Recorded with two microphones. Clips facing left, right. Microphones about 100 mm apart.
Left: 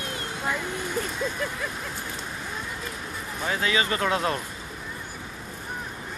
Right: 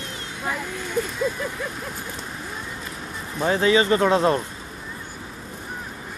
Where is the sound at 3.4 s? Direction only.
30° right (ahead or behind).